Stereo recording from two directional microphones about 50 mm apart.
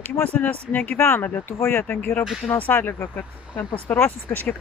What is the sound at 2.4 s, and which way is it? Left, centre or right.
Speech, left.